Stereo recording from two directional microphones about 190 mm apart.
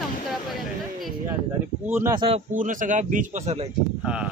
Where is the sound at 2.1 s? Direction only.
30° right (ahead or behind).